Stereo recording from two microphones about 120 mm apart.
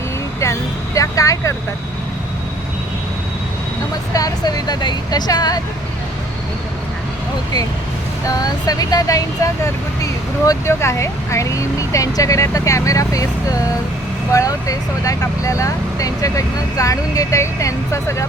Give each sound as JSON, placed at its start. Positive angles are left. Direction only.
{"t": 0.3, "sound": "speech", "side_deg": 25}
{"t": 4.1, "sound": "speech", "side_deg": 30}
{"t": 8.3, "sound": "speech", "side_deg": 30}